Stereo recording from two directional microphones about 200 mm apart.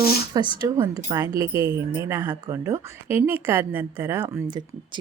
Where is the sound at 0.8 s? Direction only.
15° right (ahead or behind).